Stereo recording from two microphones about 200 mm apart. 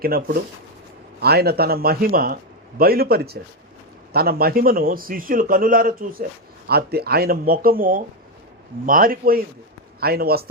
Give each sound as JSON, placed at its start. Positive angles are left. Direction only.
{"t": 0.0, "sound": "a man's voice", "side_deg": -50}